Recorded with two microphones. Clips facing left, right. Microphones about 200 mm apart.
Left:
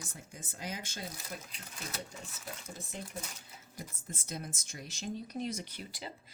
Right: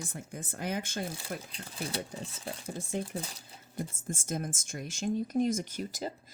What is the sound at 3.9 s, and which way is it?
Speech, 50° right (ahead or behind).